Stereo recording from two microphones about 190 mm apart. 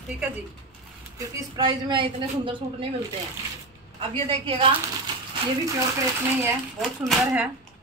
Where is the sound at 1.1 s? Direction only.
20° right (ahead or behind).